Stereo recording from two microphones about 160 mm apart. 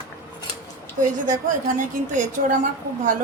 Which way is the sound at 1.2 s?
55° right (ahead or behind).